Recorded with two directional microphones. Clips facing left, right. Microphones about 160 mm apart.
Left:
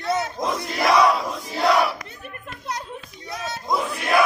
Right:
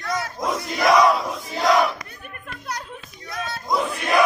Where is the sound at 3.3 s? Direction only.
20° left (ahead or behind).